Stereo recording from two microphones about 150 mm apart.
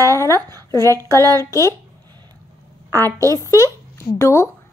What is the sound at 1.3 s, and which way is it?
Speech, 20° left (ahead or behind).